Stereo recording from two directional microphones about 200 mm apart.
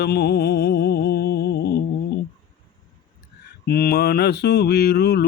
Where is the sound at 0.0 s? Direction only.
55° left (ahead or behind).